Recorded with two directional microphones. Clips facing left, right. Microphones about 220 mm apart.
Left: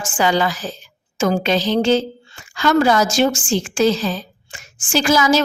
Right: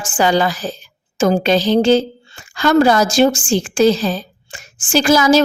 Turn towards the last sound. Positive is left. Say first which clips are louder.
# right 4 dB
turn(degrees=-35)  # may be behind; listen again after turning